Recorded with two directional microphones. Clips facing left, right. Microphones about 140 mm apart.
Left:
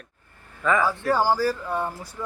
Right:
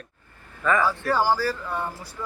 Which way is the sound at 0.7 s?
15° left (ahead or behind).